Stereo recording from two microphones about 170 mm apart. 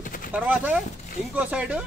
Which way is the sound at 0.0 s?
55° left (ahead or behind).